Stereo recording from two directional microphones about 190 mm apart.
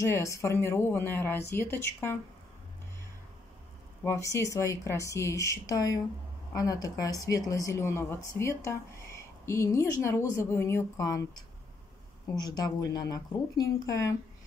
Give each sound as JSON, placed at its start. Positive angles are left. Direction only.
{"t": 0.0, "sound": "speech", "side_deg": 15}
{"t": 4.0, "sound": "speech", "side_deg": 15}